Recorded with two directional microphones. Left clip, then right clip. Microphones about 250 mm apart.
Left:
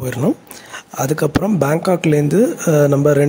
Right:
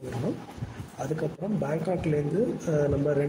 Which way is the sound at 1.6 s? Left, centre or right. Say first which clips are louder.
Left 12 dB; left.